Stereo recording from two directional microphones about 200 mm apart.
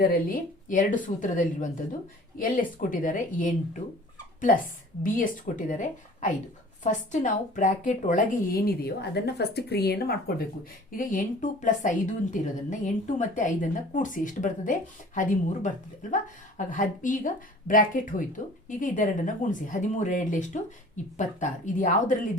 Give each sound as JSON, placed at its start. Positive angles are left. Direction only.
{"t": 0.0, "sound": "a woman's voice", "side_deg": 45}